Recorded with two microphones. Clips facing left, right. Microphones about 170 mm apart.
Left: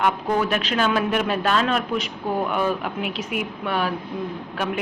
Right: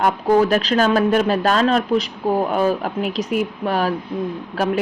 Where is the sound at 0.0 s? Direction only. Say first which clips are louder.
Right 6 dB; 40° right (ahead or behind).